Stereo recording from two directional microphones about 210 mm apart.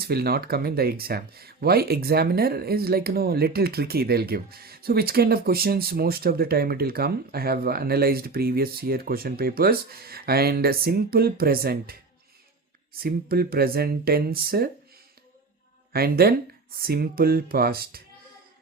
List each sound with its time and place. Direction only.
0.0 s speech: 50° right (ahead or behind)
15.9 s speech: 45° right (ahead or behind)